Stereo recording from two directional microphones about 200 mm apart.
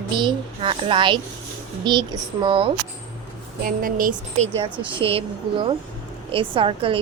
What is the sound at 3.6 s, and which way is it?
Speech, 45° right (ahead or behind).